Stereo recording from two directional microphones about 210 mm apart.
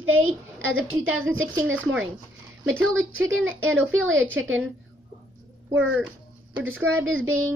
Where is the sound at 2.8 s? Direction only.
75° right (ahead or behind).